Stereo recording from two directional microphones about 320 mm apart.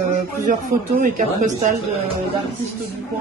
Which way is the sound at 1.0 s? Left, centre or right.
Right.